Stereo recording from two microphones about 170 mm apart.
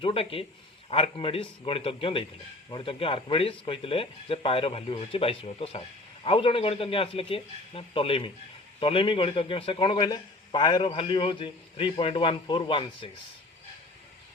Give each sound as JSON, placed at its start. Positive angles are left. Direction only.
{"t": 0.0, "sound": "a man's voice", "side_deg": 35}